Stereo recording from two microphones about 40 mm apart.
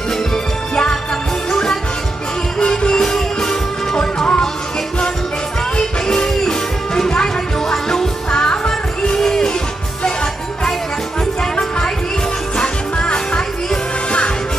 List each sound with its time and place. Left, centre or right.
1.5 s music: centre
5.8 s music: centre
12.5 s music: left